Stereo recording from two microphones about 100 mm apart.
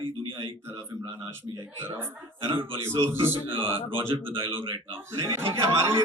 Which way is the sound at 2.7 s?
30° right (ahead or behind).